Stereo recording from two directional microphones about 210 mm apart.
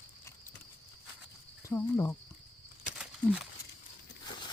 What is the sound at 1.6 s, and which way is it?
Speech, 10° left (ahead or behind).